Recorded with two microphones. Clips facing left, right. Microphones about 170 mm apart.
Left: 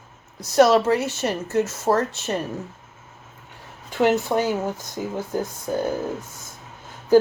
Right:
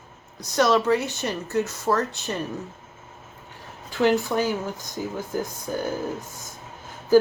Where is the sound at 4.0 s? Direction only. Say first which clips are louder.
Left 1 dB; 25° left (ahead or behind).